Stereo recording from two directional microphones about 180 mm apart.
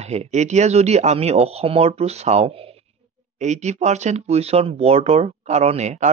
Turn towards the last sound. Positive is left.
turn(degrees=-40)  # may be behind; listen again after turning